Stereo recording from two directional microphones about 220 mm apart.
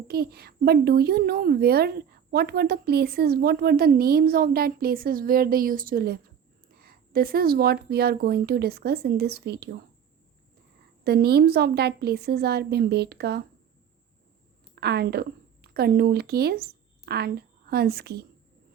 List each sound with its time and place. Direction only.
0.1 s a woman's voice: 45° right (ahead or behind)
11.0 s a woman's voice: 45° right (ahead or behind)
14.8 s a woman's voice: 45° right (ahead or behind)